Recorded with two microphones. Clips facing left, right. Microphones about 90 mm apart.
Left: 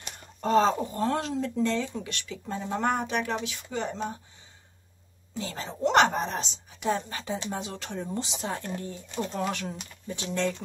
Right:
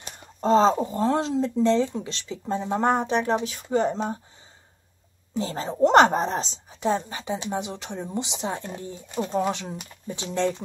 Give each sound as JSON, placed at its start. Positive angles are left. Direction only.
{"t": 0.2, "sound": "a sound", "side_deg": -25}
{"t": 0.8, "sound": "speech", "side_deg": -25}
{"t": 5.4, "sound": "speech", "side_deg": -35}
{"t": 7.0, "sound": "speech", "side_deg": -20}